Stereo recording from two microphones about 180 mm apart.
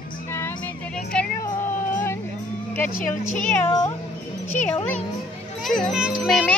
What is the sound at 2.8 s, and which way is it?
Speech, 50° left (ahead or behind).